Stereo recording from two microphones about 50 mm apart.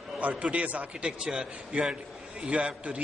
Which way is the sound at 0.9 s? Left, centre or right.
Centre.